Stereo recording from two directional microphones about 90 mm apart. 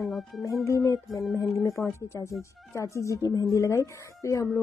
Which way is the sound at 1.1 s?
Centre (ahead or behind).